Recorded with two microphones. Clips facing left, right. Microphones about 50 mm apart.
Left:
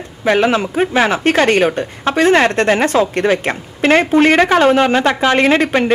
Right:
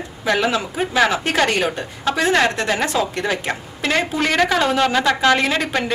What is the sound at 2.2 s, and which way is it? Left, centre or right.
A woman's voice, left.